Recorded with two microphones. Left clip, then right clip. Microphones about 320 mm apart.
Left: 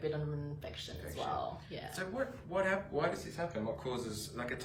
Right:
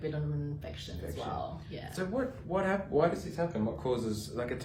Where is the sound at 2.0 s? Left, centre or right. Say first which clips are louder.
Right 5 dB; centre.